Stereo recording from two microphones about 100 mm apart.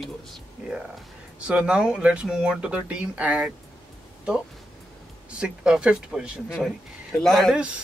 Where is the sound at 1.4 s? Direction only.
10° right (ahead or behind).